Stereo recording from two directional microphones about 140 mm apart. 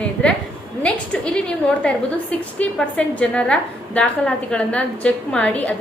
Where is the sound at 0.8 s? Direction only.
5° left (ahead or behind).